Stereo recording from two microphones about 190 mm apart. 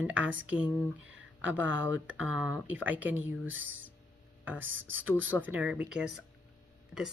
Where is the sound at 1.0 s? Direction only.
80° right.